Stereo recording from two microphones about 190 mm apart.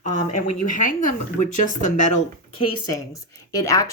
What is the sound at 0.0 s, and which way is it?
Speech, 40° left (ahead or behind).